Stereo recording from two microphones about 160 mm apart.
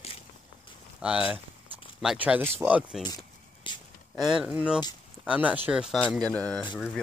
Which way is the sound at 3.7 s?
30° left (ahead or behind).